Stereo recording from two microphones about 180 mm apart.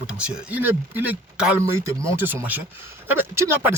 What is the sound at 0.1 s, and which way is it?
Speech, 5° right (ahead or behind).